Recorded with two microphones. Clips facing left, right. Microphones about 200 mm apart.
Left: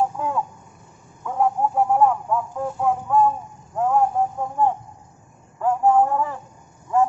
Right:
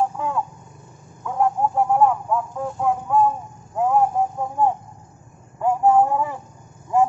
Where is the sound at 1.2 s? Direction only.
Centre (ahead or behind).